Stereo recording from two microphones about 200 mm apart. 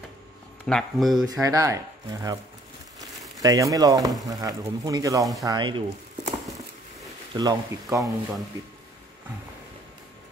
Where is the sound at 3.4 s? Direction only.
15° right (ahead or behind).